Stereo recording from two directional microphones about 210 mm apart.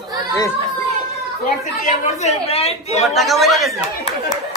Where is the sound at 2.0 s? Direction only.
35° left (ahead or behind).